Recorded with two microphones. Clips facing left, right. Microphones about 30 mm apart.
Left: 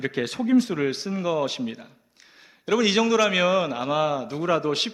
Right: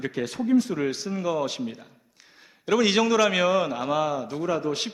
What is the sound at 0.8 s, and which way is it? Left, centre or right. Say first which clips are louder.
Speech: left 2 dB; left.